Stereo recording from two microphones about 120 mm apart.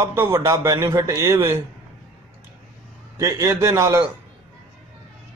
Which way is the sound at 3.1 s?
25° right (ahead or behind).